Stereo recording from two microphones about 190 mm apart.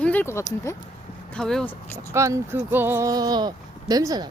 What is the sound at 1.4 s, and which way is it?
Speech, 5° left (ahead or behind).